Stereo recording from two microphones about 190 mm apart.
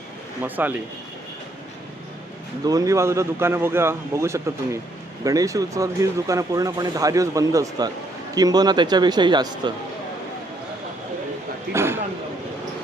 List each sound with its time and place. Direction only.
0.4 s speech: 10° right (ahead or behind)
2.6 s speech: 15° right (ahead or behind)
11.7 s a sound: 15° right (ahead or behind)